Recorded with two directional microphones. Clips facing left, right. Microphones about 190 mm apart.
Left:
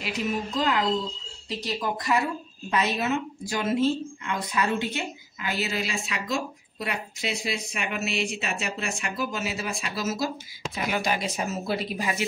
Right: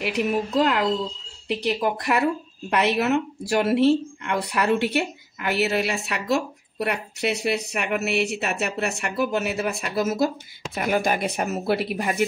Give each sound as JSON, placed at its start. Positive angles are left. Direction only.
{"t": 0.0, "sound": "speech", "side_deg": -65}